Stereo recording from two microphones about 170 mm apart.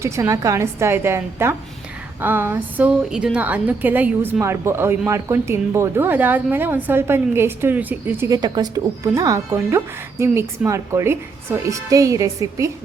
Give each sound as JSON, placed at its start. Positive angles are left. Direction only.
{"t": 0.0, "sound": "a woman's voice", "side_deg": -20}
{"t": 8.3, "sound": "speech", "side_deg": -25}